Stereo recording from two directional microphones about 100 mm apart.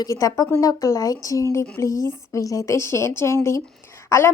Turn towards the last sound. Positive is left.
turn(degrees=25)  # may be behind; listen again after turning